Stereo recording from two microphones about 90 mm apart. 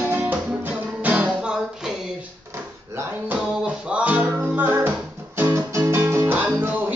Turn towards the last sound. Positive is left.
turn(degrees=-25)  # may be behind; listen again after turning